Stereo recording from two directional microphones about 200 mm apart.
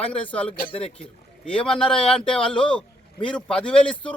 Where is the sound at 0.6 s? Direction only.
30° left (ahead or behind).